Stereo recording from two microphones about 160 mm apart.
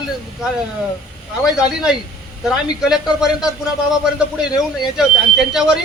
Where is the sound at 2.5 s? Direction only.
5° right (ahead or behind).